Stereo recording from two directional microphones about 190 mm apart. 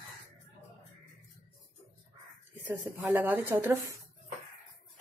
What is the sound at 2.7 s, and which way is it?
Speech, 10° right (ahead or behind).